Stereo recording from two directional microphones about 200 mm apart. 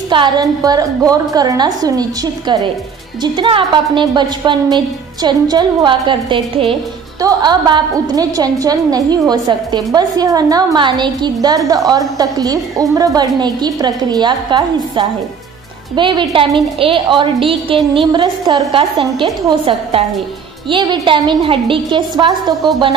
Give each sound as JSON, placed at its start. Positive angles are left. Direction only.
{"t": 0.1, "sound": "a woman's voice", "side_deg": -20}